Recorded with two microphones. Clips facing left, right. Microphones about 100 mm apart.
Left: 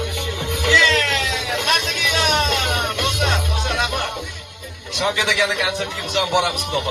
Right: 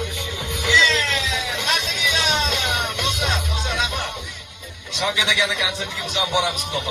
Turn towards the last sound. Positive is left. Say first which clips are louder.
# left 3 dB
turn(degrees=65)  # may be behind; listen again after turning